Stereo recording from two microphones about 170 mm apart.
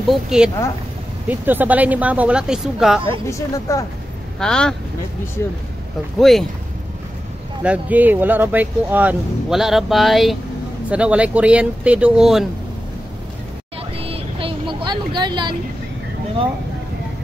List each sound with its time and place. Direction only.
0.1 s speech: 5° right (ahead or behind)
3.1 s speech: 15° left (ahead or behind)
4.4 s speech: 5° left (ahead or behind)
6.1 s speech: centre (ahead or behind)
7.6 s speech: 10° right (ahead or behind)
13.9 s vehicle: 35° right (ahead or behind)